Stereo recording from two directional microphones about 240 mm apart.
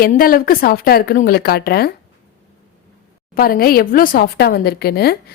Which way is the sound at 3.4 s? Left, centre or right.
Left.